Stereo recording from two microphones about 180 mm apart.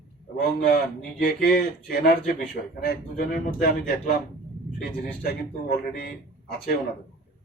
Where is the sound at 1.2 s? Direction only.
55° left (ahead or behind).